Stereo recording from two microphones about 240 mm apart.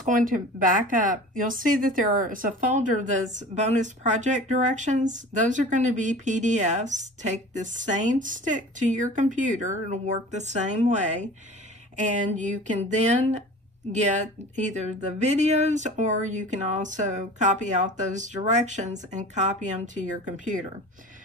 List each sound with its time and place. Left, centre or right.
0.8 s a woman's voice: right
12.1 s a sound: right
13.9 s a woman's voice: right